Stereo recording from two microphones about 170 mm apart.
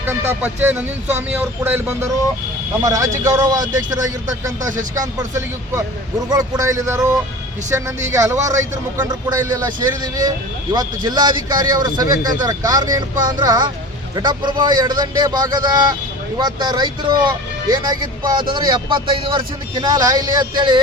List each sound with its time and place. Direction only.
0.0 s a man's voice: 10° right (ahead or behind)
4.7 s speech: 50° right (ahead or behind)
6.3 s a man's voice: 20° right (ahead or behind)